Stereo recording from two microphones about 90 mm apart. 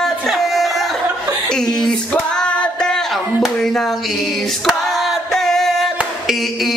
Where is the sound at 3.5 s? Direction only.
5° left (ahead or behind).